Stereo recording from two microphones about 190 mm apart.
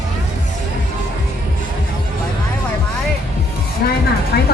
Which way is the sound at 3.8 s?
55° left (ahead or behind).